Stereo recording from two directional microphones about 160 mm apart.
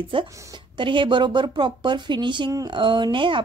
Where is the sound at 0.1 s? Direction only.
30° right (ahead or behind).